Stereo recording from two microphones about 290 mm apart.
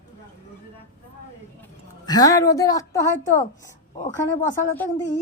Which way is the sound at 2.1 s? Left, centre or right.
Centre.